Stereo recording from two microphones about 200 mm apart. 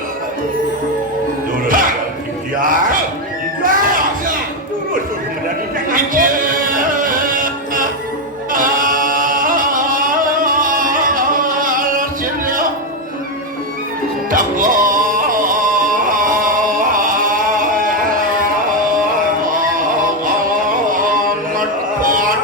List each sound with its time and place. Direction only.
1.6 s music: 45° right (ahead or behind)
2.6 s speech: 45° right (ahead or behind)
3.6 s music: 45° right (ahead or behind)
5.9 s music: 45° right (ahead or behind)
8.5 s singing: 45° right (ahead or behind)
14.3 s music: 45° right (ahead or behind)
21.5 s a sound: 45° right (ahead or behind)